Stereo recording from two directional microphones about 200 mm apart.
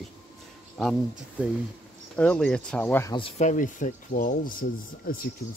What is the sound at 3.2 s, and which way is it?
Speech, 30° left (ahead or behind).